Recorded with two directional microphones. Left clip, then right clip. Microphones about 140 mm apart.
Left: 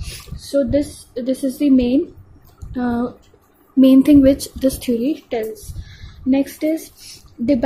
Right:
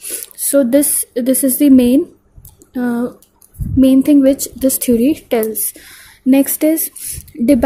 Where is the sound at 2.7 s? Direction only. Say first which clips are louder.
Right 3 dB; 30° right (ahead or behind); by 6.9 s 45° right (ahead or behind).